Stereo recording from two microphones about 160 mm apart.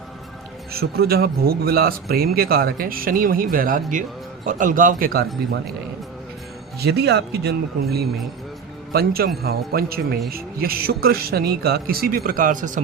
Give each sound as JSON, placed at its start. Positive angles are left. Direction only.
{"t": 0.7, "sound": "a man's voice", "side_deg": -75}
{"t": 6.7, "sound": "speech", "side_deg": -90}
{"t": 8.9, "sound": "speech", "side_deg": -70}